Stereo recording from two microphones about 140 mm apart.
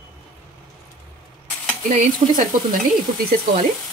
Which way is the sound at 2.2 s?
40° right (ahead or behind).